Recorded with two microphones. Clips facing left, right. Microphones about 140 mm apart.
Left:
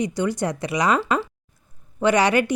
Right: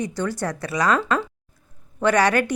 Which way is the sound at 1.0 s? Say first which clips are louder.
Even; centre (ahead or behind).